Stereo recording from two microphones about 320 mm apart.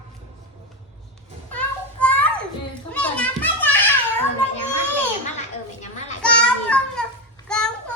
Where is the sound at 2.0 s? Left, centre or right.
Centre.